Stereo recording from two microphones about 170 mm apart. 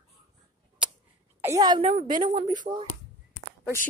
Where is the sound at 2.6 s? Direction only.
30° right (ahead or behind).